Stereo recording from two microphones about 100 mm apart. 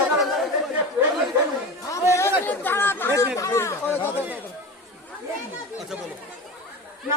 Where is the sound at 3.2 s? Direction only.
30° left (ahead or behind).